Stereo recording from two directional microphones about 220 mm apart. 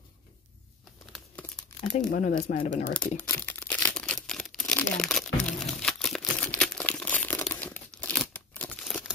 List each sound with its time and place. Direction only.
2.1 s speech: 35° left (ahead or behind)
3.2 s a sound: 5° left (ahead or behind)
6.6 s crumpling: 5° left (ahead or behind)